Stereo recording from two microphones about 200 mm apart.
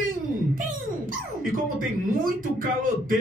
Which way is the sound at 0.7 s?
45° right (ahead or behind).